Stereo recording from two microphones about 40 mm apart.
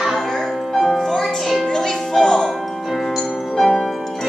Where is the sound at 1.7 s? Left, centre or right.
Centre.